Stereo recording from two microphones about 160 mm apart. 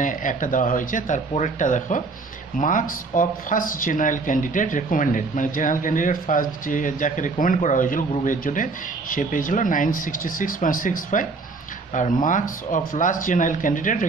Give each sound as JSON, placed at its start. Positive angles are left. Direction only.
{"t": 0.0, "sound": "speech", "side_deg": 55}